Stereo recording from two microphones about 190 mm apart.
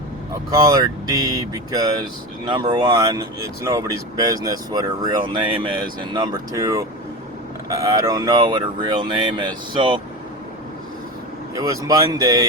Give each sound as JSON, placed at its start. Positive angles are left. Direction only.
{"t": 0.5, "sound": "speech", "side_deg": -20}
{"t": 11.5, "sound": "speech", "side_deg": -20}